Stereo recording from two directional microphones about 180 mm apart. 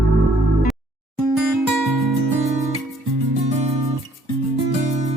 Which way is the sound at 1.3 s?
Centre (ahead or behind).